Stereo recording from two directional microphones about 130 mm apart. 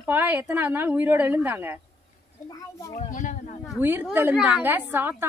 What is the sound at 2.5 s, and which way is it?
Speech, 25° left (ahead or behind).